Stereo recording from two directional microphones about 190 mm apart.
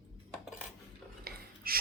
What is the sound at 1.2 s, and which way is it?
Stir, 50° right (ahead or behind).